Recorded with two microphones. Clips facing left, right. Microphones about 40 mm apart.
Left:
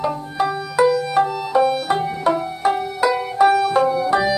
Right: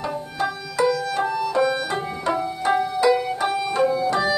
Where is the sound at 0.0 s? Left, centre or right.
Centre.